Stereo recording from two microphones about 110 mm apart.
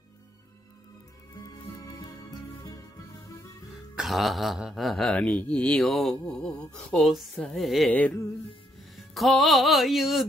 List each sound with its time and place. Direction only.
1.3 s music: 30° left (ahead or behind)
3.9 s speech: centre (ahead or behind)
5.1 s speech: 15° left (ahead or behind)
7.9 s music: 15° left (ahead or behind)
8.9 s music: centre (ahead or behind)